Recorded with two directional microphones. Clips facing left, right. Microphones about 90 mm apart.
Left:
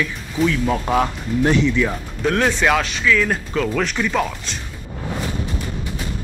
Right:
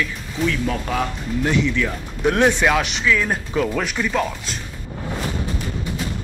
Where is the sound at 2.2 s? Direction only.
20° right (ahead or behind).